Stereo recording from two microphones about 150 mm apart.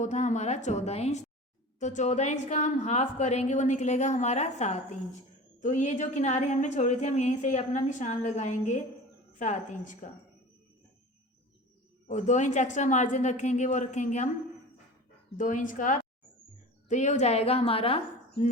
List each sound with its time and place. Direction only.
0.0 s a woman's voice: 55° left (ahead or behind)
12.0 s a woman's voice: 50° left (ahead or behind)
15.4 s a woman's voice: 60° left (ahead or behind); by 18.0 s 40° left (ahead or behind)